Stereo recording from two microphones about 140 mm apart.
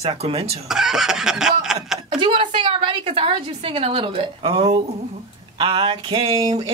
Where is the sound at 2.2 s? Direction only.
35° right (ahead or behind).